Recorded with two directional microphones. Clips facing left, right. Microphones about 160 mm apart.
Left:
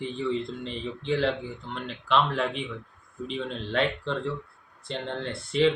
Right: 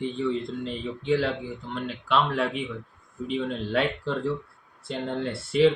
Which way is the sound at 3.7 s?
5° right (ahead or behind).